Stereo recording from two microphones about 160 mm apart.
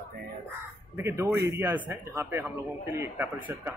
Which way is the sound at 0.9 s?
15° right (ahead or behind).